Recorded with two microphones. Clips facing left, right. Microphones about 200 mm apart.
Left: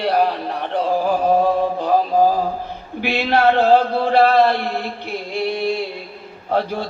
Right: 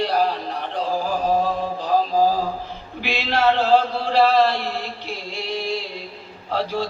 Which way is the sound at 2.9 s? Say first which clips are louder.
Left 5 dB; 55° left (ahead or behind).